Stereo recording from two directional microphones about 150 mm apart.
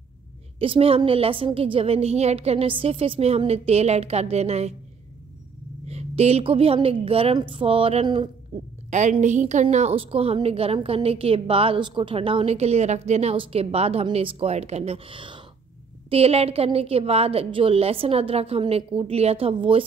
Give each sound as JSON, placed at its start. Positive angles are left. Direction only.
{"t": 0.6, "sound": "a woman's voice", "side_deg": -40}
{"t": 5.9, "sound": "a woman's voice", "side_deg": -45}
{"t": 9.2, "sound": "a woman's voice", "side_deg": -50}